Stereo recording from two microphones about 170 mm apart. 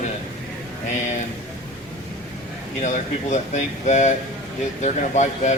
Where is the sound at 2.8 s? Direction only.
45° left (ahead or behind).